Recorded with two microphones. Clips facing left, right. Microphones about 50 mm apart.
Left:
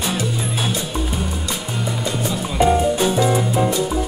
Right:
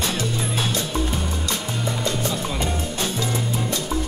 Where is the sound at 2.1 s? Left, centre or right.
Centre.